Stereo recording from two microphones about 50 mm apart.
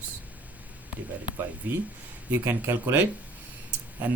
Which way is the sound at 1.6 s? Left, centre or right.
Right.